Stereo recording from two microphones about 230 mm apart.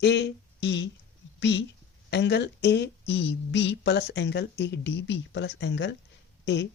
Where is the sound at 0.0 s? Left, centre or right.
Left.